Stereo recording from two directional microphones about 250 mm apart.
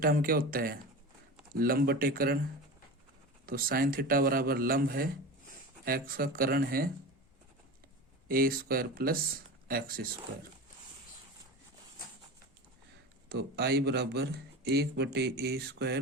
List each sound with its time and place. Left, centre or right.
0.0 s a man's voice: right
3.4 s a man's voice: right
8.3 s a man's voice: right
13.2 s a man's voice: right